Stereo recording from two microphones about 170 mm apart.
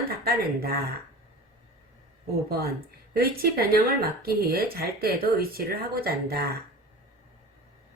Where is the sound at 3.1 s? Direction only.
60° right (ahead or behind).